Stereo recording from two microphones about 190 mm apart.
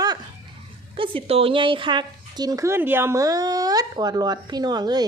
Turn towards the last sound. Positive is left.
turn(degrees=-20)  # may be behind; listen again after turning